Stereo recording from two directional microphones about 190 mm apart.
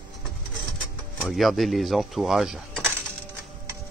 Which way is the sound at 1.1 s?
Centre (ahead or behind).